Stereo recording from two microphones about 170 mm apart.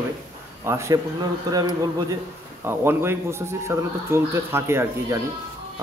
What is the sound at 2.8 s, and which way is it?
Speech, 15° right (ahead or behind).